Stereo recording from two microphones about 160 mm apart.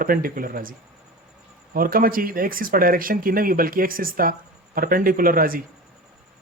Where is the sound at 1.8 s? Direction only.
65° right (ahead or behind).